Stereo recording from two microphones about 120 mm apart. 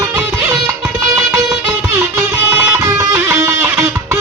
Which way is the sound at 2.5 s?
15° right (ahead or behind).